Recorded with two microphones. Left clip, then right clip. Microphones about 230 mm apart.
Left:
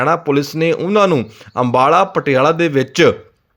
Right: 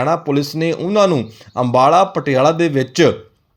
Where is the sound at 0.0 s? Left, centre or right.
Centre.